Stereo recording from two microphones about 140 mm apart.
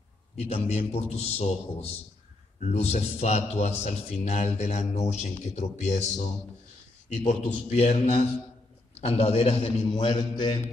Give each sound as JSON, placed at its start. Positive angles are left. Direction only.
{"t": 0.7, "sound": "a man's voice", "side_deg": 50}
{"t": 7.2, "sound": "a man's voice", "side_deg": 50}
{"t": 9.8, "sound": "a man's voice", "side_deg": 30}